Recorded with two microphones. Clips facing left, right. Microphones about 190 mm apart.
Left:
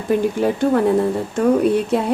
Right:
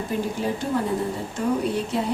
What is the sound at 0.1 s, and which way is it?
Speech, 65° left (ahead or behind).